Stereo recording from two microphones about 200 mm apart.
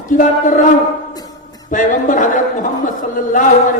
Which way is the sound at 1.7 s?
40° left (ahead or behind).